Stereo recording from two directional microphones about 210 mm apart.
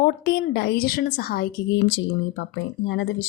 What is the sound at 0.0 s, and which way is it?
A woman's voice, 50° left (ahead or behind).